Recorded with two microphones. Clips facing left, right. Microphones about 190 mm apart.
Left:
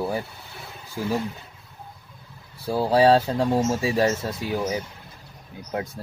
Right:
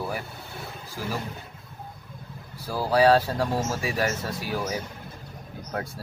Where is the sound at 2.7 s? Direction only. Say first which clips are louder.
Left 2 dB; 25° left (ahead or behind).